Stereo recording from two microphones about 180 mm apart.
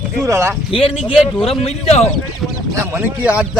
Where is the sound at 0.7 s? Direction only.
30° left (ahead or behind).